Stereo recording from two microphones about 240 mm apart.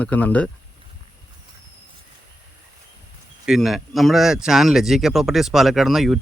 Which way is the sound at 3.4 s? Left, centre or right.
Centre.